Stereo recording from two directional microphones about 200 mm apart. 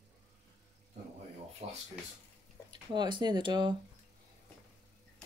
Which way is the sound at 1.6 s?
30° right (ahead or behind).